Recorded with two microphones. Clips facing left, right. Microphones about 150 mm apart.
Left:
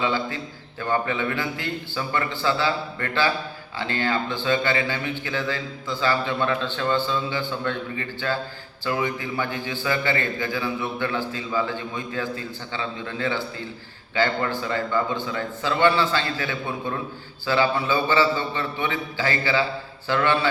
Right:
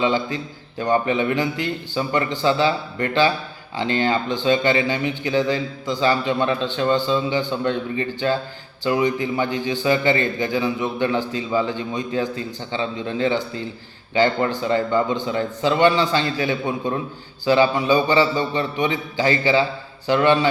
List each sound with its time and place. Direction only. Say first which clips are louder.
0.0 s a man's voice: right 4 dB; 20° right (ahead or behind)